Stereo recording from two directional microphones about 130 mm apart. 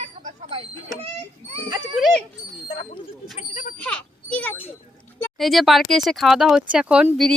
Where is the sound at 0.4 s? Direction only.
50° right (ahead or behind).